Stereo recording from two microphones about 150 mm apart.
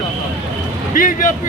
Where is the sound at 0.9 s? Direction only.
60° left (ahead or behind).